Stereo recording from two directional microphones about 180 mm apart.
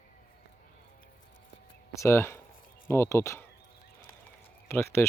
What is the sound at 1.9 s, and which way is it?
Speech, 15° left (ahead or behind).